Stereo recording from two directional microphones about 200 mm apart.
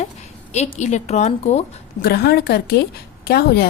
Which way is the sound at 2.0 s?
55° left (ahead or behind).